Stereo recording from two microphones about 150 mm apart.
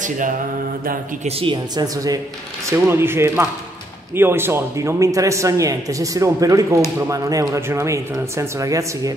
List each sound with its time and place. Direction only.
1.2 s a woman's voice: 40° right (ahead or behind)
2.7 s a man's voice: 15° right (ahead or behind)